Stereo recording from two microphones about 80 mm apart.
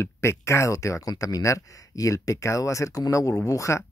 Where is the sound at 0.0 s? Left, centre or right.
Left.